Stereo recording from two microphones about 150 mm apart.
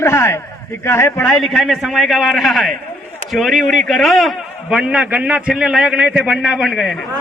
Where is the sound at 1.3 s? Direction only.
5° left (ahead or behind).